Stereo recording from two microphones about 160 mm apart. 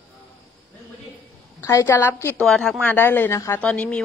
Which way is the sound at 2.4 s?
Centre (ahead or behind).